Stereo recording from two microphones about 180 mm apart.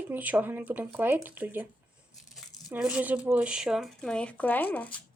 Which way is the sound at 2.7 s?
5° right (ahead or behind).